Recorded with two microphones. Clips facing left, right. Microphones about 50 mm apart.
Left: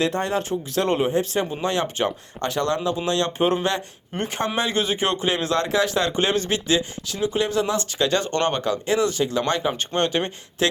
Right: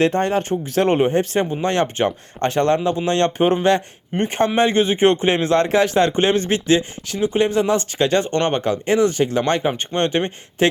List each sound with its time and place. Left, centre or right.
0.0 s speech: right